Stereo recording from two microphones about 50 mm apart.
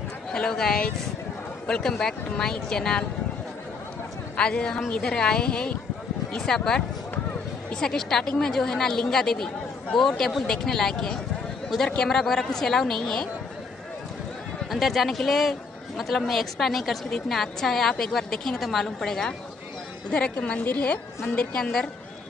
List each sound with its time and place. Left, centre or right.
0.3 s speech: centre
4.4 s a woman's voice: centre
14.7 s a woman's voice: centre
20.1 s a woman's voice: left